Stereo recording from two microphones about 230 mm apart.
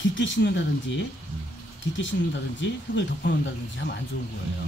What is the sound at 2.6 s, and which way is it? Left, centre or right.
Speech, left.